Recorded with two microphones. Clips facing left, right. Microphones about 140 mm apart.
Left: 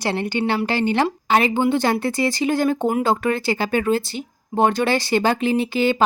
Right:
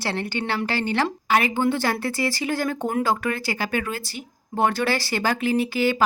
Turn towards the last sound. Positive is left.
turn(degrees=25)  # may be behind; listen again after turning